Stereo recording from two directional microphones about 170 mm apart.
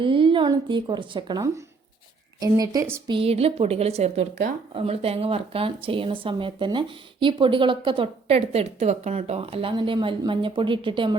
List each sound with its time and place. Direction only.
0.0 s speech: 30° right (ahead or behind)
3.1 s speech: 35° right (ahead or behind)